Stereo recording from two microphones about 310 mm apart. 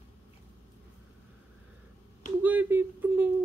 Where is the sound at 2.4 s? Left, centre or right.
Centre.